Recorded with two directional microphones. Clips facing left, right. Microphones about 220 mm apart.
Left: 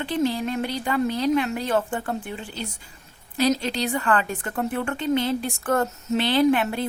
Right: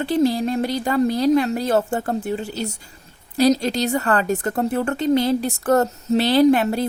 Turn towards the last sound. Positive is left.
turn(degrees=-40)  # may be behind; listen again after turning